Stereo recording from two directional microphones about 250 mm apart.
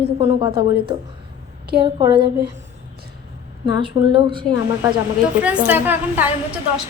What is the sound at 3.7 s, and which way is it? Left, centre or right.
A woman's voice, centre.